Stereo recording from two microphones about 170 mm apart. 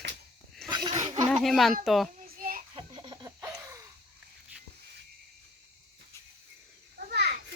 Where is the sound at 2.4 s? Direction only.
55° right (ahead or behind).